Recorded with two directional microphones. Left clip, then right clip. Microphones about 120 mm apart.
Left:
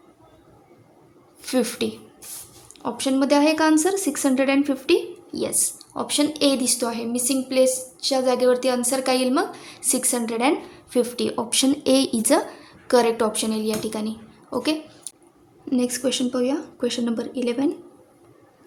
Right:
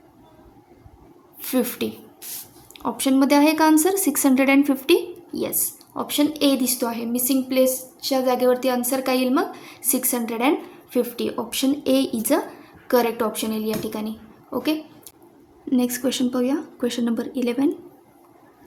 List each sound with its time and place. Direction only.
1.4 s a woman's voice: 10° left (ahead or behind)
2.7 s speech: 5° right (ahead or behind)
5.3 s a woman's voice: 5° left (ahead or behind)
15.7 s a woman's voice: 5° right (ahead or behind)